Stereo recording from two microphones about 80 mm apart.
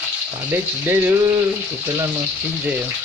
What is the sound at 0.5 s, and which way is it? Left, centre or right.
Frying, right.